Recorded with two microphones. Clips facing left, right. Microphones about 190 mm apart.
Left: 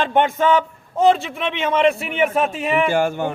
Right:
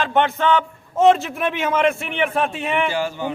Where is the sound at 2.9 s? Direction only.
50° left (ahead or behind).